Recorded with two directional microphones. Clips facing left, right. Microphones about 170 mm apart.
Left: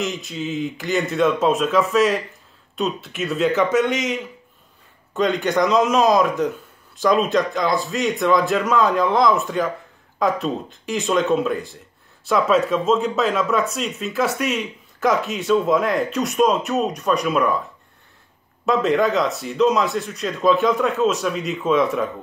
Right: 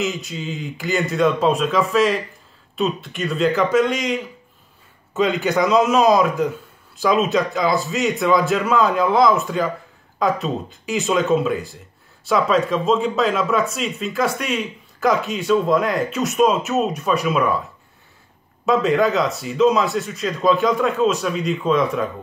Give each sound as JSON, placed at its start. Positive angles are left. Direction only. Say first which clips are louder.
{"t": 0.0, "sound": "speech", "louder": "right 1 dB", "side_deg": 0}
{"t": 18.7, "sound": "speech", "louder": "right 1 dB", "side_deg": 0}